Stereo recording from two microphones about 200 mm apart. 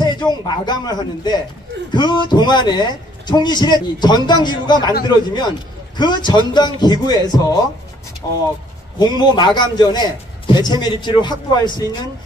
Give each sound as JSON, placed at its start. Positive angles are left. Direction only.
{"t": 0.0, "sound": "speech", "side_deg": 20}